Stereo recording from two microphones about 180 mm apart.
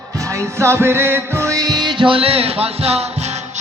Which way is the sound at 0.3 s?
15° right (ahead or behind).